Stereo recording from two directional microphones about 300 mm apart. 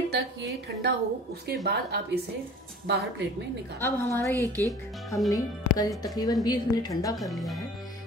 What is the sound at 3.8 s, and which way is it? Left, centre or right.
Speech, centre.